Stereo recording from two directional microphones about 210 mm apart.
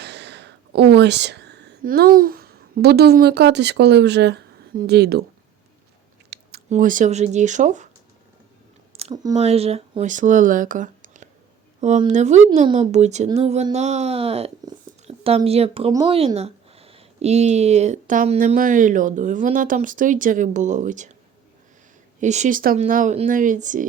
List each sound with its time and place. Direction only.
0.0 s speech: 55° right (ahead or behind)
6.3 s chewing: 50° right (ahead or behind)
6.7 s speech: 40° right (ahead or behind)
8.9 s a sound: 30° right (ahead or behind)
9.3 s speech: 30° right (ahead or behind)
15.9 s speech: 15° right (ahead or behind)
16.1 s speech: 30° right (ahead or behind)
22.2 s speech: 35° right (ahead or behind)